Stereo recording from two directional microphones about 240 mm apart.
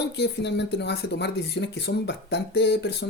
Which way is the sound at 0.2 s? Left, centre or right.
Left.